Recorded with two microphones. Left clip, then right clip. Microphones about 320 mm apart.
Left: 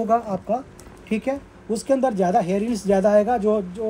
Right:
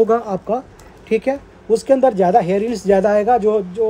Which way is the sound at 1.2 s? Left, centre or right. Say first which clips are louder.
Right 6 dB; right.